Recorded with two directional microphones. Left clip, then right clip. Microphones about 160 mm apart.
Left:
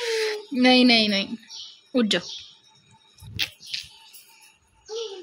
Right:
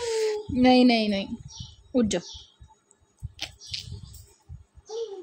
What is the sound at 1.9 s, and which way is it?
Speech, 5° right (ahead or behind).